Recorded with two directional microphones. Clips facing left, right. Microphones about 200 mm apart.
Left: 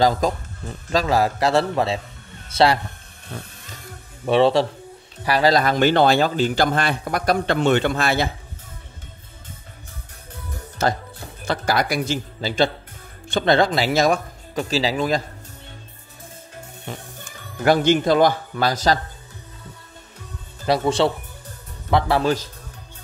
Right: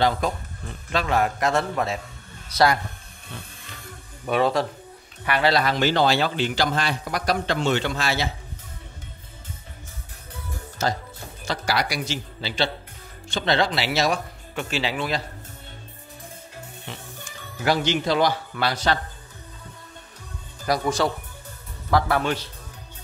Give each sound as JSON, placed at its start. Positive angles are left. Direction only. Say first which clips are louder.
{"t": 0.0, "sound": "a man's voice", "louder": "left 4 dB", "side_deg": 40}
{"t": 4.3, "sound": "speech", "louder": "left 5 dB", "side_deg": 30}
{"t": 10.8, "sound": "speech", "louder": "left 4 dB", "side_deg": 65}
{"t": 17.6, "sound": "speech", "louder": "left 6 dB", "side_deg": 50}
{"t": 20.6, "sound": "a man's voice", "louder": "left 4 dB", "side_deg": 25}